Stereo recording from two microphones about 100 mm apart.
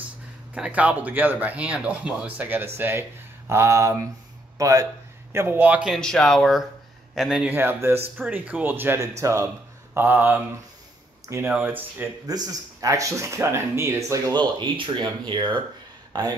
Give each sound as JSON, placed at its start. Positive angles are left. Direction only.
{"t": 0.6, "sound": "speech", "side_deg": -15}
{"t": 5.9, "sound": "speech", "side_deg": 5}
{"t": 7.4, "sound": "speech", "side_deg": -20}
{"t": 9.0, "sound": "speech", "side_deg": -30}
{"t": 9.9, "sound": "speech", "side_deg": -20}
{"t": 11.5, "sound": "speech", "side_deg": -20}
{"t": 12.3, "sound": "speech", "side_deg": -40}
{"t": 14.3, "sound": "speech", "side_deg": -50}